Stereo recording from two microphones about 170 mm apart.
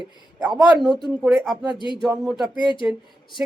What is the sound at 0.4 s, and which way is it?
A woman's voice, 5° right (ahead or behind).